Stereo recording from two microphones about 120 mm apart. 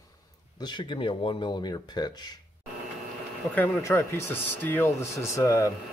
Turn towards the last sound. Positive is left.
turn(degrees=25)  # may be behind; listen again after turning